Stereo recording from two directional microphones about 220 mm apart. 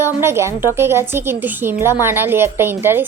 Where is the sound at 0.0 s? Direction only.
10° right (ahead or behind).